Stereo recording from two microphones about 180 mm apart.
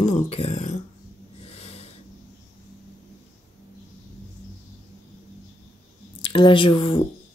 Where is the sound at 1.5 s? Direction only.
35° left (ahead or behind).